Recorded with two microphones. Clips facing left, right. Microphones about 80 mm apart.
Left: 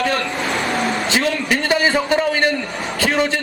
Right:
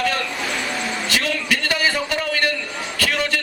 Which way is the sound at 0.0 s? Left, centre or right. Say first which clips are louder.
Left 3 dB; left.